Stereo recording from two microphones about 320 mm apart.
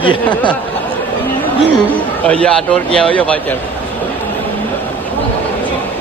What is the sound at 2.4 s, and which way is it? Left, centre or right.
Speech, centre.